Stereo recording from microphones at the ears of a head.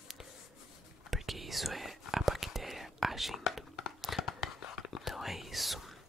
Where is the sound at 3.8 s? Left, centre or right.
Left.